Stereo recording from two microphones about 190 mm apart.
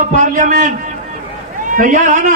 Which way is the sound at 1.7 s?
45° right (ahead or behind).